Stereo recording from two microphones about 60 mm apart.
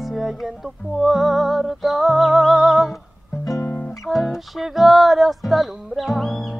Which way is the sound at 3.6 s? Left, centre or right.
Left.